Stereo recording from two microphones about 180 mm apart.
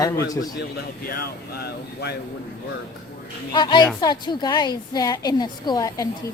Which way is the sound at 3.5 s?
25° left (ahead or behind).